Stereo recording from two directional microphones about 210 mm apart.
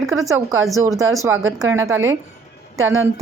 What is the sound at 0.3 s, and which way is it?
Speech, 15° right (ahead or behind).